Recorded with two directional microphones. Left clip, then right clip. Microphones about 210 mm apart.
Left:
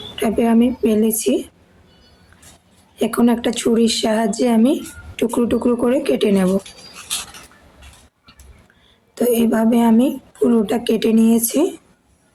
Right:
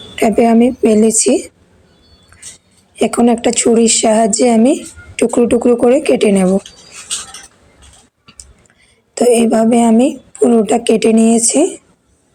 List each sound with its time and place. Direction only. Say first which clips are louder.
0.2 s speech: right 7 dB; 25° right (ahead or behind)
2.3 s music: right 11 dB; 25° right (ahead or behind)
2.9 s speech: right 5 dB; 20° right (ahead or behind)
9.1 s speech: right 7 dB; 20° right (ahead or behind)